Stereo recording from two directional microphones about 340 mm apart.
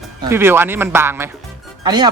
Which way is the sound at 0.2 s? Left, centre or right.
Centre.